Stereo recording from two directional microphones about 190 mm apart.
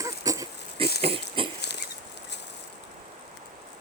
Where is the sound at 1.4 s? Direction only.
30° right (ahead or behind).